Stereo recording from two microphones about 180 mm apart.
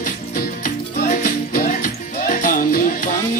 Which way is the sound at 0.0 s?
55° left (ahead or behind).